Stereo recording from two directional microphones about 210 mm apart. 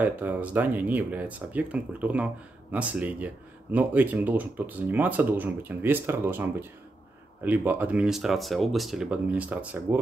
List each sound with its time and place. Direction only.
0.0 s speech: 10° right (ahead or behind)